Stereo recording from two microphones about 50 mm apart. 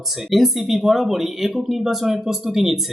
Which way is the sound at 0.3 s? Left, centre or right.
Centre.